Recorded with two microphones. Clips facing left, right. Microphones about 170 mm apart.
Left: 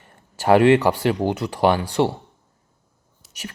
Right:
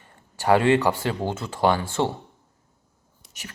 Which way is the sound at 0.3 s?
20° left (ahead or behind).